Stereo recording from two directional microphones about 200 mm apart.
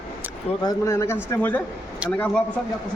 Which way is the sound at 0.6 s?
15° left (ahead or behind).